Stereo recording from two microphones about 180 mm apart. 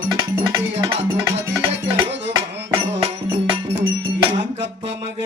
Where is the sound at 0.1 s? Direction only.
20° right (ahead or behind).